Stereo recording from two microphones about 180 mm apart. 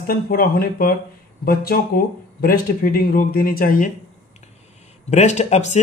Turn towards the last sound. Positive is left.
turn(degrees=40)  # may be behind; listen again after turning